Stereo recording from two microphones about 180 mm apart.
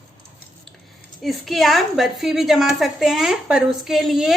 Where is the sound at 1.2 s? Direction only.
Centre (ahead or behind).